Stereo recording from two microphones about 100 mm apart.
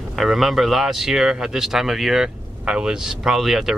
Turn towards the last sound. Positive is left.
turn(degrees=-5)  # may be behind; listen again after turning